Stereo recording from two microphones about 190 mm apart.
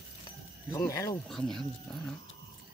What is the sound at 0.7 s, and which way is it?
Speech, 20° left (ahead or behind).